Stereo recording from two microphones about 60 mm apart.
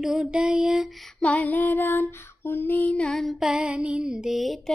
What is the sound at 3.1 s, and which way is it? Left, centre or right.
Lullaby, centre.